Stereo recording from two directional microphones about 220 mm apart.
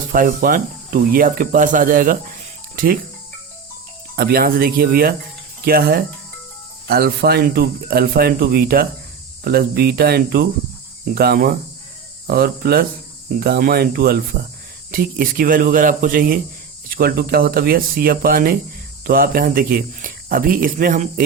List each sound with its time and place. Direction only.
0.1 s speech: 40° right (ahead or behind)
4.1 s speech: 45° right (ahead or behind)